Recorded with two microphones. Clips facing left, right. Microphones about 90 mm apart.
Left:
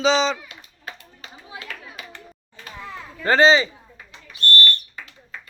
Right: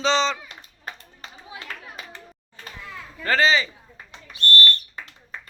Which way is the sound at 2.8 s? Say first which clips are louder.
Left 5 dB; 25° left (ahead or behind).